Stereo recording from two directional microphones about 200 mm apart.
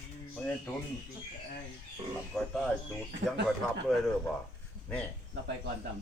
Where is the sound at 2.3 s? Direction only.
Centre (ahead or behind).